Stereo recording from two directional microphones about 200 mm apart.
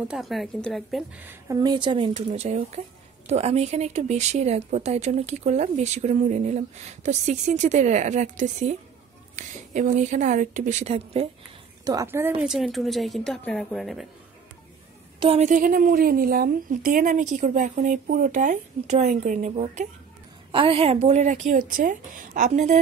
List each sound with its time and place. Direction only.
0.1 s a woman's voice: centre (ahead or behind)
1.5 s a woman's voice: 20° right (ahead or behind)
2.1 s speech: 35° right (ahead or behind)
11.8 s a woman's voice: 15° right (ahead or behind); by 14.0 s centre (ahead or behind)
15.1 s speech: 30° right (ahead or behind)